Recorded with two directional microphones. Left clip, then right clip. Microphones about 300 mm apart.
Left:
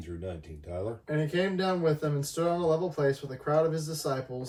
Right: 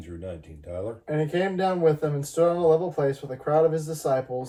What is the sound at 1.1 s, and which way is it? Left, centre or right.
Speech, centre.